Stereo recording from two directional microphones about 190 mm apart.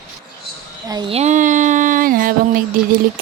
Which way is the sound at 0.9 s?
25° right (ahead or behind).